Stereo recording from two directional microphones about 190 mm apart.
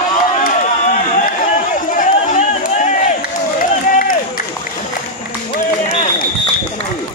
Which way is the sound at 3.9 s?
45° left (ahead or behind).